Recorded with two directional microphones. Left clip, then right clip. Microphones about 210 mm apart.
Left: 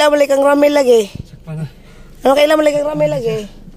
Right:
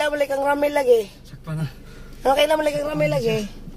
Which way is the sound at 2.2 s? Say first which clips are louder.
Left 7 dB; 45° left (ahead or behind).